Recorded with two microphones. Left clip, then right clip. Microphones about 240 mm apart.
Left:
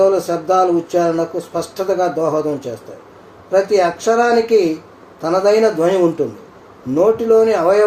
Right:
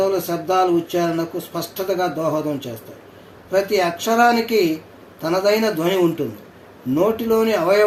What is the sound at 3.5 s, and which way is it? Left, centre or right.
Speech, right.